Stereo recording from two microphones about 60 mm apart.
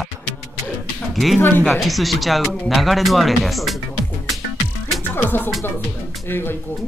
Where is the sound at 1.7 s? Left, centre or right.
Centre.